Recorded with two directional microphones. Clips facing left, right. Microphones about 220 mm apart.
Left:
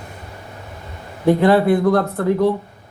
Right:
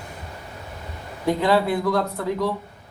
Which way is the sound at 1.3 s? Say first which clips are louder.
Left 7 dB; 55° left (ahead or behind).